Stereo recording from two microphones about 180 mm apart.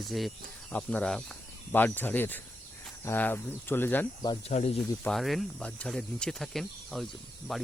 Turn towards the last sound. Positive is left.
turn(degrees=0)  # may be behind; listen again after turning